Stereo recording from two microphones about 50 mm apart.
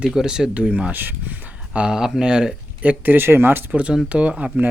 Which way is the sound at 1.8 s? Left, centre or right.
Centre.